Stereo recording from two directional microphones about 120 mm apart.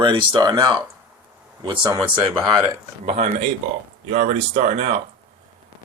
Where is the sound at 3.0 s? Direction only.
70° right (ahead or behind).